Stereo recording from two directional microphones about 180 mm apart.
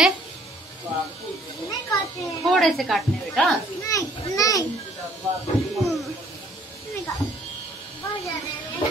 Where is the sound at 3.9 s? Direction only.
20° left (ahead or behind).